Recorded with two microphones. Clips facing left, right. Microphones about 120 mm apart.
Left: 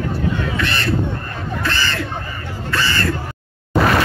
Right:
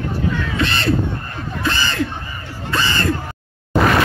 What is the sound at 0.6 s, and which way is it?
Crow, 25° right (ahead or behind).